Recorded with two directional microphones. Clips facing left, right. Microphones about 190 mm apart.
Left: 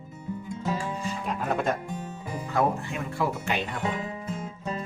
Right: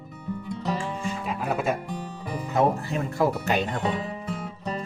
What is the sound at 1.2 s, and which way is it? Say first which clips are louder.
Music: even; 5° right (ahead or behind).